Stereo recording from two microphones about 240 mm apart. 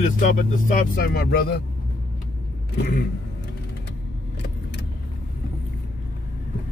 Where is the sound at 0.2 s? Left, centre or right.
Left.